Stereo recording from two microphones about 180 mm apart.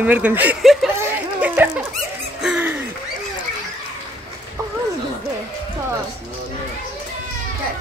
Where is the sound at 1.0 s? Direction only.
10° right (ahead or behind).